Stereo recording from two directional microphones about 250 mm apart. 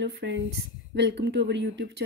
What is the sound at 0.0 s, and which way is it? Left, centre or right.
Speech, right.